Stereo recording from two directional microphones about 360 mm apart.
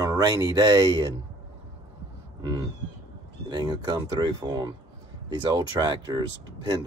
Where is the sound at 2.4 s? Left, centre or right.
Centre.